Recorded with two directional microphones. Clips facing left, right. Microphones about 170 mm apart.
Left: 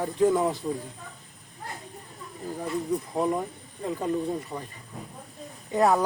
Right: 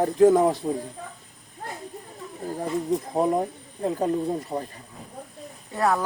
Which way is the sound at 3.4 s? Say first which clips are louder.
Right 6 dB; 40° right (ahead or behind).